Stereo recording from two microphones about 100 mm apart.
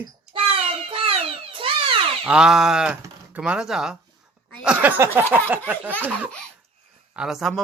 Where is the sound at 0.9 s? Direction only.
65° right (ahead or behind).